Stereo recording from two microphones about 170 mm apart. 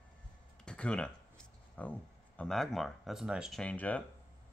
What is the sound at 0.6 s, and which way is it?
Speech, 5° left (ahead or behind).